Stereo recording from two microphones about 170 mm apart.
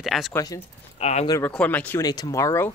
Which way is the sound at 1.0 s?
40° left (ahead or behind).